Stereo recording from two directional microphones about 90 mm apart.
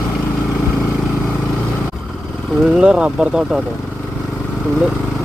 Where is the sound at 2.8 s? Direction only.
10° right (ahead or behind).